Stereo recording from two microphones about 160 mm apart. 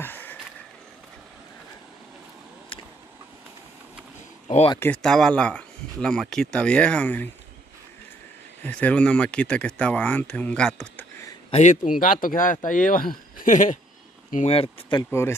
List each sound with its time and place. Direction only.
0.0 s a sound: 10° left (ahead or behind)
4.7 s speech: 10° left (ahead or behind)
8.6 s speech: 10° left (ahead or behind)
11.5 s speech: 50° left (ahead or behind)
12.0 s speech: 60° left (ahead or behind)
14.3 s speech: 40° left (ahead or behind)
15.0 s speech: 15° left (ahead or behind)